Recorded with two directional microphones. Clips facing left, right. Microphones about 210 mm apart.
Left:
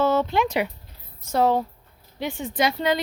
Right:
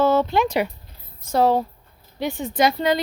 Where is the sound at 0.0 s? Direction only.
35° right (ahead or behind).